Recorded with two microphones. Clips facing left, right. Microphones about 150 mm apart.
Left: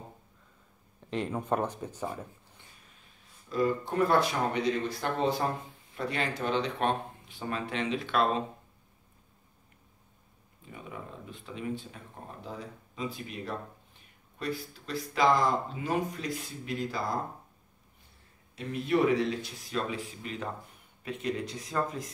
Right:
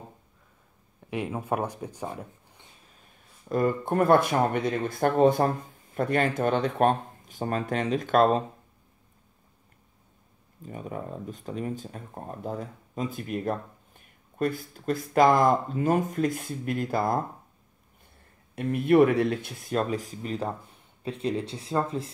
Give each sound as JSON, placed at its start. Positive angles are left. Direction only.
{"t": 1.1, "sound": "speech", "side_deg": -10}
{"t": 3.4, "sound": "speech", "side_deg": -55}
{"t": 10.6, "sound": "speech", "side_deg": -45}
{"t": 18.5, "sound": "speech", "side_deg": -55}